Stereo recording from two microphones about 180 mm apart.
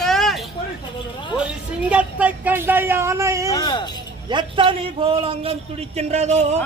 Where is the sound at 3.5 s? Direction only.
25° left (ahead or behind).